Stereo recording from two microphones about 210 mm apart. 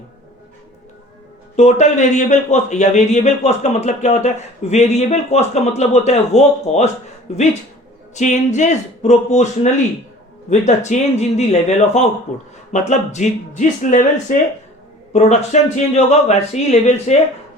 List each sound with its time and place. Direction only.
1.5 s speech: 35° left (ahead or behind)
10.8 s speech: 30° left (ahead or behind)